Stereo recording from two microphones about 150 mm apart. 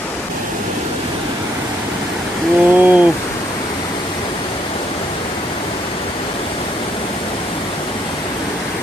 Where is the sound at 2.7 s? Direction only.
10° right (ahead or behind).